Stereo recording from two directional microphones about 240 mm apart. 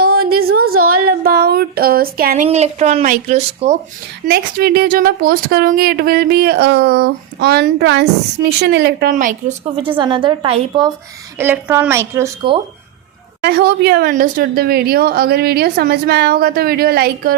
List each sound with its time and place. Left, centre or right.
0.3 s a sound: right
0.8 s a sound: right
1.2 s speech: right
4.3 s speech: right
10.0 s a woman's voice: right
11.3 s a woman's voice: centre
13.4 s speech: right